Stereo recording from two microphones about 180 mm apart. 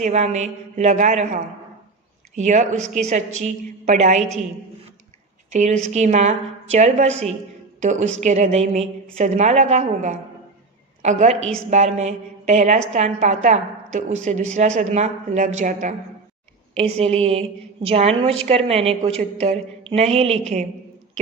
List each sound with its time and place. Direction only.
0.0 s a woman's voice: 40° right (ahead or behind)
5.5 s a woman's voice: 40° right (ahead or behind)